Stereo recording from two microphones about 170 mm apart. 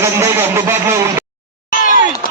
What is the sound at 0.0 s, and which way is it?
Speech, 15° right (ahead or behind).